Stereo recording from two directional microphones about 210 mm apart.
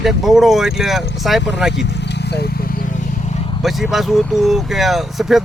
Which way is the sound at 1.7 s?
55° left (ahead or behind).